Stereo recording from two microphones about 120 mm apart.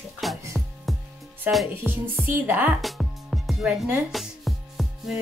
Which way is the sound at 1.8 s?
20° right (ahead or behind).